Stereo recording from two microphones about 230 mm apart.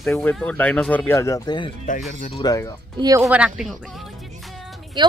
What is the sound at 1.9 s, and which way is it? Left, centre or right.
Speech, left.